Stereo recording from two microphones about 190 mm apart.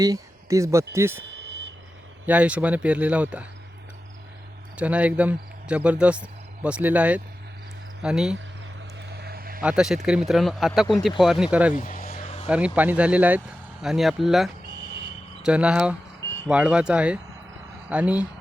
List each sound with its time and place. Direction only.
0.0 s speech: 15° right (ahead or behind)
1.4 s a sound: 65° right (ahead or behind)
2.2 s speech: 5° right (ahead or behind)
4.8 s speech: 5° right (ahead or behind)
9.0 s vehicle: 60° right (ahead or behind)
9.6 s speech: 5° right (ahead or behind)
11.7 s vehicle: 45° left (ahead or behind)
12.1 s vehicle: 35° left (ahead or behind)
12.5 s speech: 5° right (ahead or behind)